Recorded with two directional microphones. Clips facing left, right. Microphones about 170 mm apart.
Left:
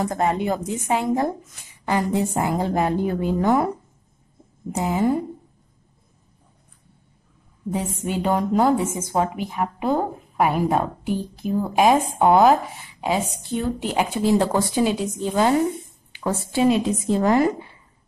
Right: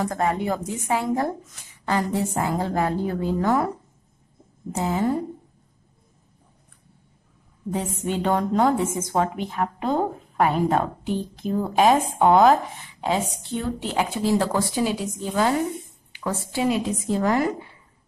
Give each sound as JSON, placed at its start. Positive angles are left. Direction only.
{"t": 0.0, "sound": "a woman's voice", "side_deg": 20}
{"t": 4.7, "sound": "a woman's voice", "side_deg": 15}
{"t": 7.7, "sound": "a woman's voice", "side_deg": 10}